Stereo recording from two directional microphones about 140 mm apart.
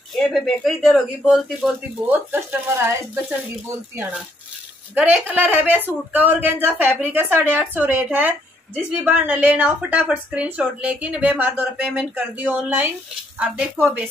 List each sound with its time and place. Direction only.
0.1 s speech: centre (ahead or behind)